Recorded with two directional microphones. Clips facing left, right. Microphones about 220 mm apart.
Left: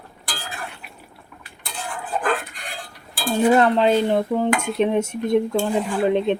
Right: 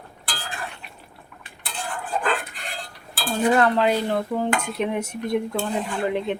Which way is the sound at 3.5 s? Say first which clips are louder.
Left 3 dB; 20° left (ahead or behind).